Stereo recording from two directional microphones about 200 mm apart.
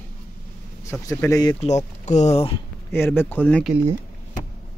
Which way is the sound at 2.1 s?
35° left (ahead or behind).